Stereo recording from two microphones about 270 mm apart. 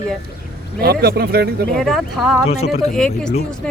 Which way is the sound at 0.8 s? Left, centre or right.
Right.